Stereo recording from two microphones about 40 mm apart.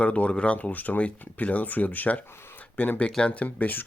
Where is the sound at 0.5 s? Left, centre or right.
Left.